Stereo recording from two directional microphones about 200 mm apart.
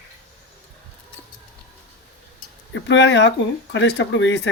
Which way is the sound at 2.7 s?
65° left (ahead or behind).